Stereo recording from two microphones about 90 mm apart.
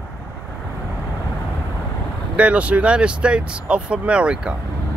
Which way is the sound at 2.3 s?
15° right (ahead or behind).